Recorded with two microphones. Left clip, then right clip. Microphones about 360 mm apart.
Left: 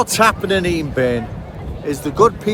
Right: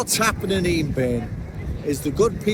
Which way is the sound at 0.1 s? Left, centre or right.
Centre.